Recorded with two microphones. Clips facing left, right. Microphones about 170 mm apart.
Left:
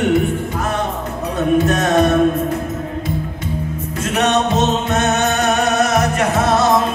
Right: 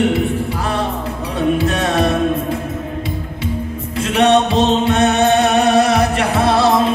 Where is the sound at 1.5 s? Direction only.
30° right (ahead or behind).